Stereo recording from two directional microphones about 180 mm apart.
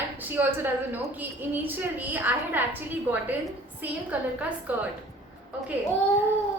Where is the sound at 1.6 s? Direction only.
10° right (ahead or behind).